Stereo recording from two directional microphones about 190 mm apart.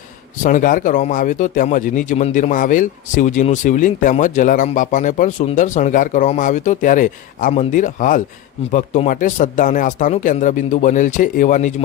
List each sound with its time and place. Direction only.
0.4 s a man's voice: 45° left (ahead or behind)